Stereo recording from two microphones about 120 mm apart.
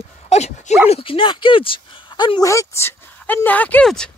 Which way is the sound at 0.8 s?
50° left (ahead or behind).